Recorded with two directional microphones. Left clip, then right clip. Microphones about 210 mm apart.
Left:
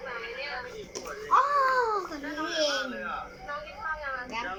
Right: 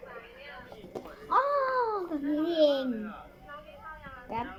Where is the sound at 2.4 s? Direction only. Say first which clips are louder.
Right 3 dB; 20° right (ahead or behind).